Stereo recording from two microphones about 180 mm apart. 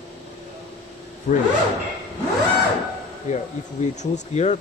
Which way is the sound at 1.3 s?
45° left (ahead or behind).